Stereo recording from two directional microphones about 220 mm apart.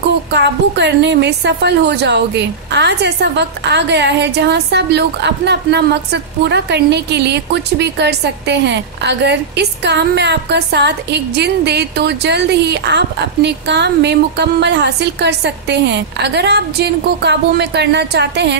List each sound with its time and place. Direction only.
0.3 s a woman's voice: 50° right (ahead or behind)